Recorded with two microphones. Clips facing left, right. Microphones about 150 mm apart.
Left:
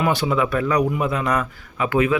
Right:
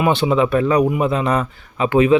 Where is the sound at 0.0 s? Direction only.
25° right (ahead or behind).